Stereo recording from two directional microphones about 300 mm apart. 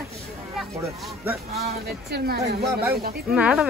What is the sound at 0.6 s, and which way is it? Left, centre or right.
Speech, centre.